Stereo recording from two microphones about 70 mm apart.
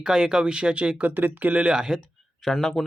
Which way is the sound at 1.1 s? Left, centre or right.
Right.